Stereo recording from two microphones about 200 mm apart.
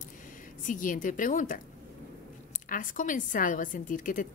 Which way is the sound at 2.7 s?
40° left (ahead or behind).